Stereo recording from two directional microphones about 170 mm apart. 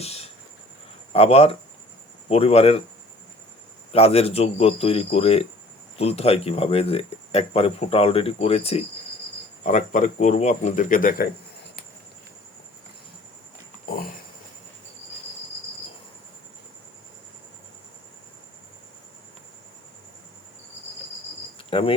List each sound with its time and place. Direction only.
0.0 s insect: 35° left (ahead or behind)
1.1 s speech: 35° left (ahead or behind)
3.9 s speech: 35° left (ahead or behind); by 11.3 s 55° left (ahead or behind)
21.7 s cricket: 30° left (ahead or behind)